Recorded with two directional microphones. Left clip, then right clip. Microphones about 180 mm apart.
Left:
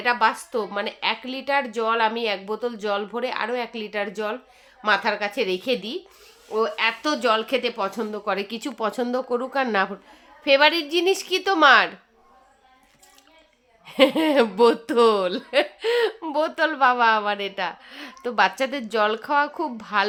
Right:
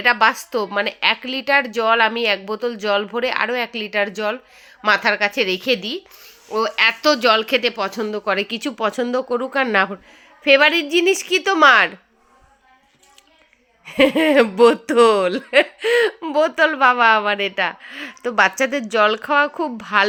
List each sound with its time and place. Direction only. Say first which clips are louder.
0.0 s speech: right 5 dB; 35° right (ahead or behind)
6.5 s speech: right 5 dB; 45° right (ahead or behind)
7.0 s speech: right 6 dB; 25° right (ahead or behind)
13.8 s speech: right 3 dB; 20° right (ahead or behind)